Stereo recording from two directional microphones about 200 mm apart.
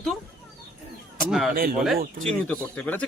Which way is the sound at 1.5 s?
45° right (ahead or behind).